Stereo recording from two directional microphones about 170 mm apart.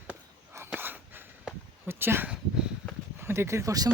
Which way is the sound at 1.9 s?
15° right (ahead or behind).